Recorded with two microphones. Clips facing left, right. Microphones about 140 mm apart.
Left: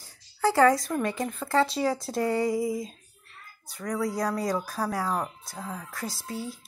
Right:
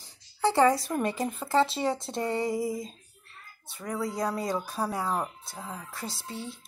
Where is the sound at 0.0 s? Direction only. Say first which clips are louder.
Left 1 dB; 20° right (ahead or behind).